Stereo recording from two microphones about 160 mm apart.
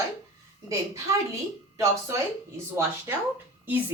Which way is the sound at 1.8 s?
15° right (ahead or behind).